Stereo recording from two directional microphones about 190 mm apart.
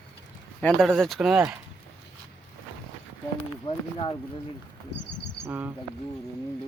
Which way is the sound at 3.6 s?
25° left (ahead or behind).